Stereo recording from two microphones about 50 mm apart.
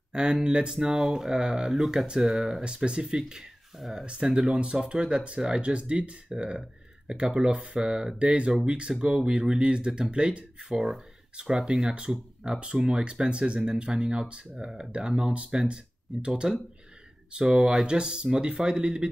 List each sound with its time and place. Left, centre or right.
0.1 s speech: centre
3.7 s speech: centre
4.0 s speech: centre